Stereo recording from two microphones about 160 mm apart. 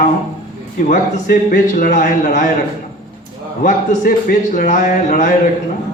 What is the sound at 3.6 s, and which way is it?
A man's voice, 60° left (ahead or behind).